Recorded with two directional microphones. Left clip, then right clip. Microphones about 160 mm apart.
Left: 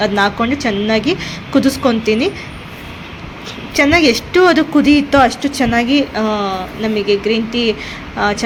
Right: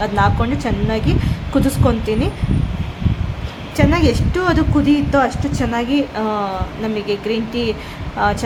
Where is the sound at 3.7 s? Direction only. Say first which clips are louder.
Left 5 dB; 20° left (ahead or behind).